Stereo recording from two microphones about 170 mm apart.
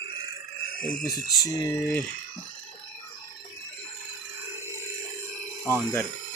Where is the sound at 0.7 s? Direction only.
55° left (ahead or behind).